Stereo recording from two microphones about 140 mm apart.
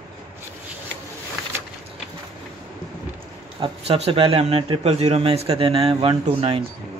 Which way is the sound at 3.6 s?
45° right (ahead or behind).